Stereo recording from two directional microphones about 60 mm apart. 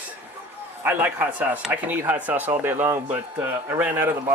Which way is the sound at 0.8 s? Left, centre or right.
Right.